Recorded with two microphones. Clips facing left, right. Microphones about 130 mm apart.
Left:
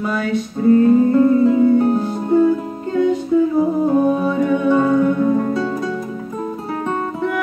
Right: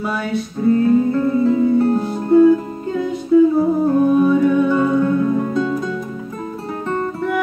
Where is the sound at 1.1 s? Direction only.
15° left (ahead or behind).